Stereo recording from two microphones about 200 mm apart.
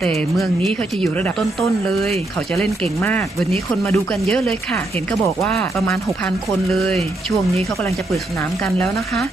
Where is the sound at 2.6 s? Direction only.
10° left (ahead or behind).